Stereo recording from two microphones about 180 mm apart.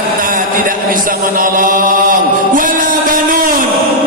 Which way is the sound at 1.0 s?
50° right (ahead or behind).